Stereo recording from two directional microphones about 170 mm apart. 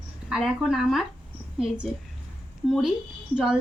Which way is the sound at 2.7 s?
Centre (ahead or behind).